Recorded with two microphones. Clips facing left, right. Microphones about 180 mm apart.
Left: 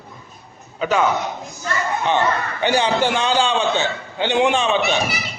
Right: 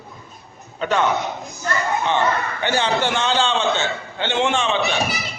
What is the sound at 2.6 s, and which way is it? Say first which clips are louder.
A man's voice: left 3 dB; 15° left (ahead or behind).